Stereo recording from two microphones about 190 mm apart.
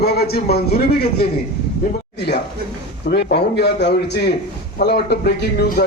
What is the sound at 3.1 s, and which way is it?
A man's voice, 60° left (ahead or behind).